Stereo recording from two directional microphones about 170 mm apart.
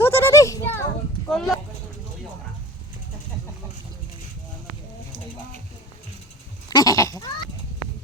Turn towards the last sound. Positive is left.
turn(degrees=20)  # may be behind; listen again after turning